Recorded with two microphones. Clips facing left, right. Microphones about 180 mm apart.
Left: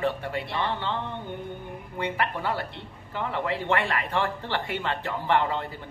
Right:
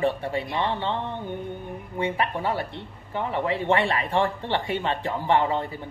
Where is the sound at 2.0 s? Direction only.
25° right (ahead or behind).